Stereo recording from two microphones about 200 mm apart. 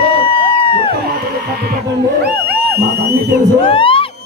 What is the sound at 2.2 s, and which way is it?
Speech, 55° right (ahead or behind).